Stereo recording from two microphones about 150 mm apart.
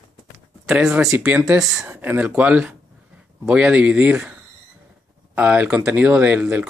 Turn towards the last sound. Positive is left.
turn(degrees=-10)  # may be behind; listen again after turning